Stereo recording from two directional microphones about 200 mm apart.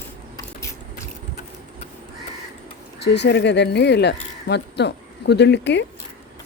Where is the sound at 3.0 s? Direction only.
55° left (ahead or behind).